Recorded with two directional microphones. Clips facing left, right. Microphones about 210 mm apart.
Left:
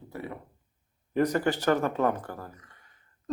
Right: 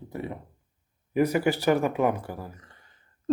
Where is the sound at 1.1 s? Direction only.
10° right (ahead or behind).